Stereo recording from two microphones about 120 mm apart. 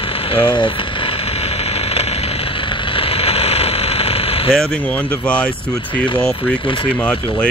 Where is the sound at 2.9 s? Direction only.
55° left (ahead or behind).